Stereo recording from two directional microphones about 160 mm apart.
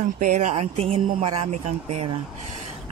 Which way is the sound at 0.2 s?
50° right (ahead or behind).